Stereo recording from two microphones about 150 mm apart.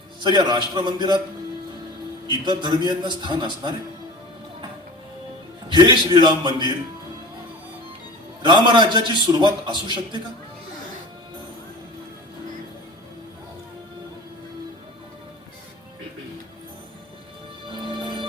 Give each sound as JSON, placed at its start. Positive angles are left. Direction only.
{"t": 0.2, "sound": "a man's voice", "side_deg": -30}
{"t": 2.2, "sound": "a man's voice", "side_deg": -30}
{"t": 5.6, "sound": "a man's voice", "side_deg": -30}
{"t": 8.4, "sound": "a man's voice", "side_deg": -30}
{"t": 17.7, "sound": "music", "side_deg": -35}